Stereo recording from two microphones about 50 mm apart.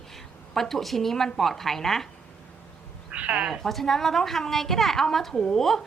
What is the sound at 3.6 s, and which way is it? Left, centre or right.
A woman's voice, centre.